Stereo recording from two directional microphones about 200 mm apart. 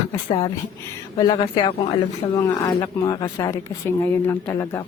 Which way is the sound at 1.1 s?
20° left (ahead or behind).